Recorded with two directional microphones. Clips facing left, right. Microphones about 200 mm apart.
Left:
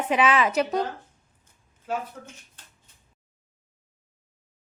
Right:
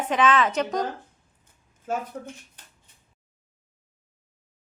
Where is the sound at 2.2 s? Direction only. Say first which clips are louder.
Right 7 dB; 30° right (ahead or behind).